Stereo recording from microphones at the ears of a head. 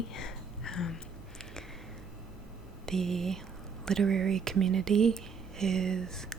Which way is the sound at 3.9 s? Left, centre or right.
Right.